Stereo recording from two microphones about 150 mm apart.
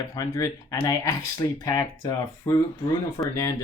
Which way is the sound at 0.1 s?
20° left (ahead or behind).